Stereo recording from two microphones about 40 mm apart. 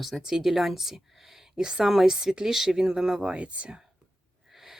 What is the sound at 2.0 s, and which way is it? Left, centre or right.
Speech, centre.